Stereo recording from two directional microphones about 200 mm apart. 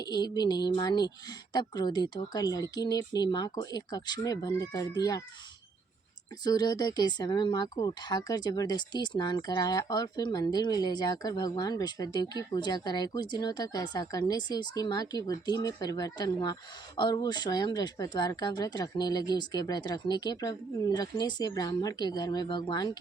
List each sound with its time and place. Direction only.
0.0 s speech: 20° left (ahead or behind)
6.4 s speech: 20° left (ahead or behind)